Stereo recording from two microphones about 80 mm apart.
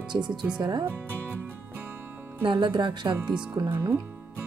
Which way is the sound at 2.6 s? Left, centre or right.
Right.